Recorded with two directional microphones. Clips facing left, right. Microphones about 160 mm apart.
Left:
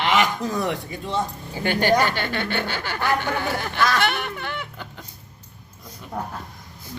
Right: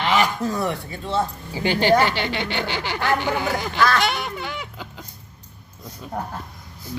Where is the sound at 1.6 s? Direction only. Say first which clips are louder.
Right 1 dB; 55° left (ahead or behind).